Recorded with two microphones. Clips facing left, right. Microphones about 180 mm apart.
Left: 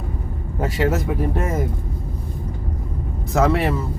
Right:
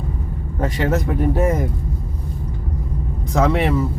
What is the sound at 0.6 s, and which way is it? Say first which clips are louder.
Speech: right 1 dB; 5° left (ahead or behind).